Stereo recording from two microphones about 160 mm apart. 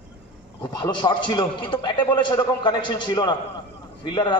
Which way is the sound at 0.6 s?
30° left (ahead or behind).